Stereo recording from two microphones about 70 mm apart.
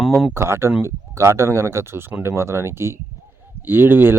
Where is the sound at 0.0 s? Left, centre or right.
Centre.